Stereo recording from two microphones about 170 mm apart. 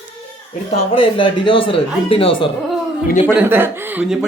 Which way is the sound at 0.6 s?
30° left (ahead or behind).